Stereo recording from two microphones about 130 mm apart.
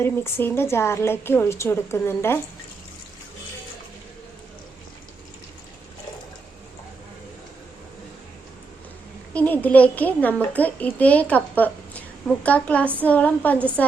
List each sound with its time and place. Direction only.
0.0 s a woman's voice: 20° left (ahead or behind)
9.3 s a child's voice: 10° left (ahead or behind)